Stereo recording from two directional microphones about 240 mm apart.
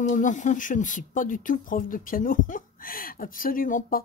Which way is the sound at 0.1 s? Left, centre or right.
Left.